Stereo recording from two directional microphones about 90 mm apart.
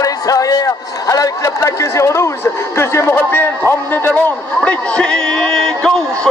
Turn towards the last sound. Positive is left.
turn(degrees=5)  # may be behind; listen again after turning